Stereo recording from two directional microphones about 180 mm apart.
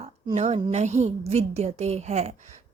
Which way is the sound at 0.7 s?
40° right (ahead or behind).